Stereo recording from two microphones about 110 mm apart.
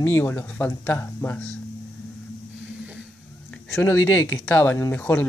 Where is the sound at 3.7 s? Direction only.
25° left (ahead or behind).